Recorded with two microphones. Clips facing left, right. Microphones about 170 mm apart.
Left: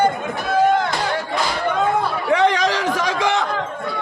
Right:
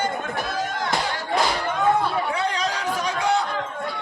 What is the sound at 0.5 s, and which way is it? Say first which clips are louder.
Chop: left 16 dB; 60° left (ahead or behind).